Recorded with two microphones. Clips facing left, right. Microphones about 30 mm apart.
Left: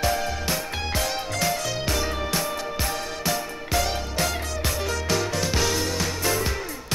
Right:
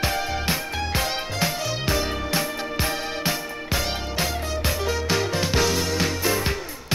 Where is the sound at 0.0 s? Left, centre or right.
Right.